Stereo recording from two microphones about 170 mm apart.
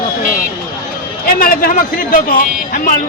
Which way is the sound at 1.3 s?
60° left (ahead or behind).